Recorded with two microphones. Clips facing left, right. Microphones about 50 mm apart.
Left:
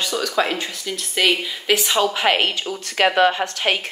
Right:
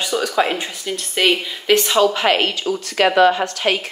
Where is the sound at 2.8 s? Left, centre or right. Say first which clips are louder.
Right 2 dB; left.